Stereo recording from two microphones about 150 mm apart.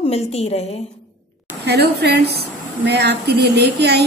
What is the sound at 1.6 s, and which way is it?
A woman's voice, 90° right.